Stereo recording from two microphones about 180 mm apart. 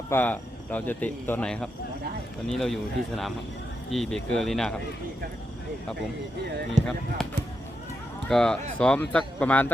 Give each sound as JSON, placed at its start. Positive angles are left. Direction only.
{"t": 0.1, "sound": "speech", "side_deg": 10}
{"t": 6.8, "sound": "speech", "side_deg": -40}
{"t": 8.3, "sound": "speech", "side_deg": 5}